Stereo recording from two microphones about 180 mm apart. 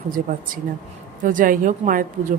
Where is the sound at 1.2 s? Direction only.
50° right (ahead or behind).